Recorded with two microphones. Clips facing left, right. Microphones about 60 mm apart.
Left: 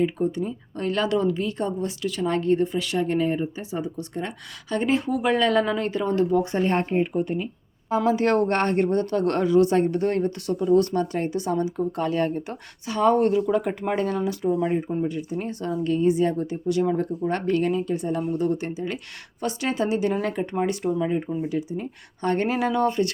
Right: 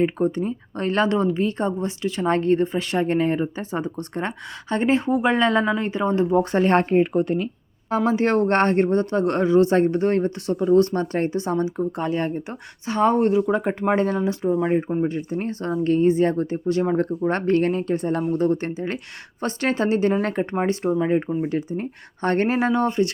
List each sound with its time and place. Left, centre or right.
0.0 s speech: right
6.4 s speech: right
8.0 s speech: right
15.0 s speech: right
21.0 s speech: right
22.5 s speech: right